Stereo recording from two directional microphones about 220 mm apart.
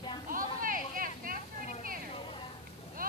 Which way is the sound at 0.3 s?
40° right (ahead or behind).